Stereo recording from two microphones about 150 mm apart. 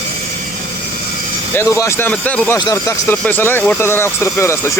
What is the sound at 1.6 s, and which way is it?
Speech, 15° left (ahead or behind).